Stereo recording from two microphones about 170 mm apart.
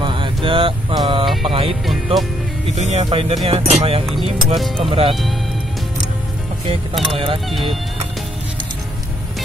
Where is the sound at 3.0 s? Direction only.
35° right (ahead or behind).